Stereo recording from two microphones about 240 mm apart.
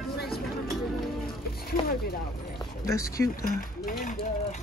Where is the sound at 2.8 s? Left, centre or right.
Centre.